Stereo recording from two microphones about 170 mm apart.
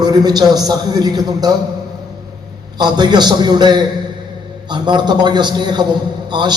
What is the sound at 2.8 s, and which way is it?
A man's voice, 25° right (ahead or behind).